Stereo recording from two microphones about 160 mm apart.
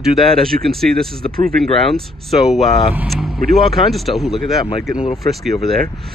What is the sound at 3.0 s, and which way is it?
Vehicle, centre (ahead or behind).